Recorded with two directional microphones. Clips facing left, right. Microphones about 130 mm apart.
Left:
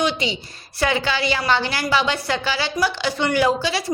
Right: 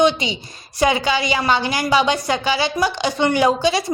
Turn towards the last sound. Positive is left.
turn(degrees=-20)  # may be behind; listen again after turning